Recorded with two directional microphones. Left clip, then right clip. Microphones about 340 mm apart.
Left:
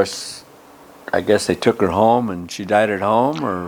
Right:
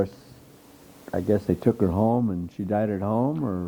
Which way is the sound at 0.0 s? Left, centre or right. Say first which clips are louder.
Left 9 dB; centre.